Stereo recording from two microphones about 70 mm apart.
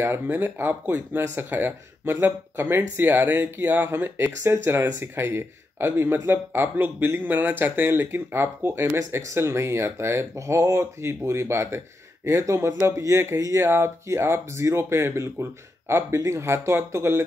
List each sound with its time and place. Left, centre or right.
0.0 s speech: right